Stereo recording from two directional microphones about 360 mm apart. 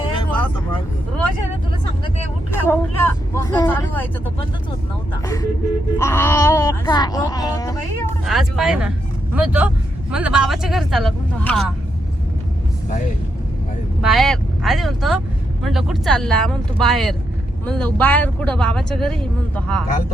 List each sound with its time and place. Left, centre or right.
0.2 s vehicle: centre
2.5 s speech: centre
5.2 s speech: centre
14.0 s speech: centre